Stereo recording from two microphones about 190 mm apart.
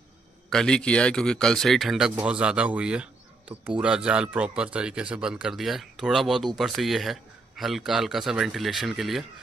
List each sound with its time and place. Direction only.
0.5 s speech: 5° left (ahead or behind)